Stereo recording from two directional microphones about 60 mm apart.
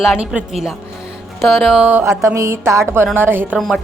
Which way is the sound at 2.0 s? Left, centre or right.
Right.